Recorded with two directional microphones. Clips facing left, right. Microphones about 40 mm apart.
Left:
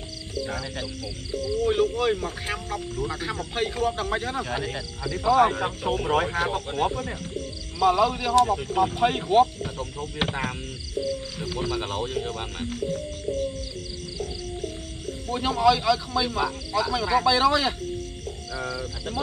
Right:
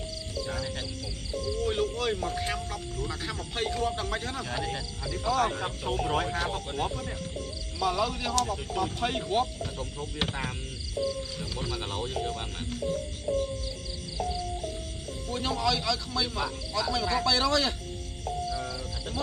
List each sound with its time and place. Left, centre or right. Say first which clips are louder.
1.6 s speech: left 7 dB; centre
11.0 s speech: left 2 dB; centre
11.5 s speech: left 7 dB; centre
13.3 s music: even; right
15.2 s speech: left 8 dB; centre